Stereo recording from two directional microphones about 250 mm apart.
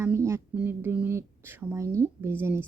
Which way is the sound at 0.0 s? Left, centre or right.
Centre.